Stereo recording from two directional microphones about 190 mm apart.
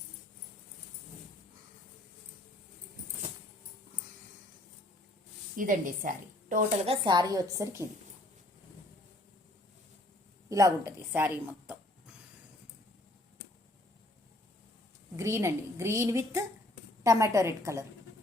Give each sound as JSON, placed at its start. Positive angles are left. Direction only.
{"t": 5.5, "sound": "a woman's voice", "side_deg": -45}
{"t": 6.8, "sound": "a woman's voice", "side_deg": -25}
{"t": 10.5, "sound": "speech", "side_deg": -15}
{"t": 15.1, "sound": "a woman's voice", "side_deg": -15}